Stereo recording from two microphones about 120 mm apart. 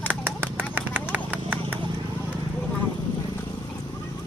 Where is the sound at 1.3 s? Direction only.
10° right (ahead or behind).